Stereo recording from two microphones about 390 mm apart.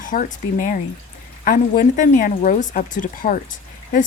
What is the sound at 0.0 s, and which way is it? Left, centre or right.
Speech, centre.